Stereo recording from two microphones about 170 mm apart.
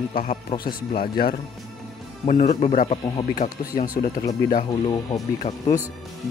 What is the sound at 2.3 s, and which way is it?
Speech, 45° left (ahead or behind).